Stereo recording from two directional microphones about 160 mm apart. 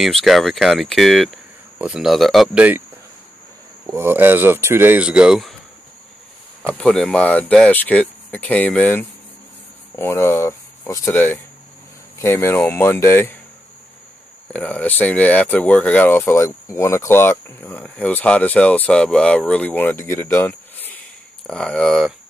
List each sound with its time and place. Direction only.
0.0 s speech: centre (ahead or behind)
3.8 s speech: 15° right (ahead or behind)
6.8 s speech: 5° left (ahead or behind)
14.5 s speech: 10° left (ahead or behind)